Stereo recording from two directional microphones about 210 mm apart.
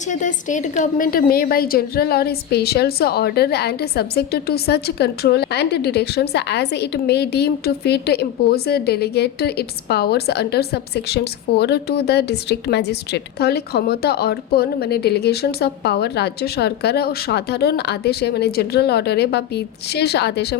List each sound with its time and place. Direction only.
0.1 s a woman's voice: 35° left (ahead or behind); by 20.6 s 50° left (ahead or behind)